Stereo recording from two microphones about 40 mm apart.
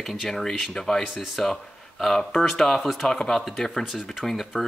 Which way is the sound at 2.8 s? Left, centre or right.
Centre.